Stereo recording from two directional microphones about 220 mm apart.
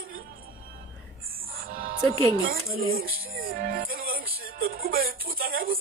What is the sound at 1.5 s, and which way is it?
Music, 40° right (ahead or behind).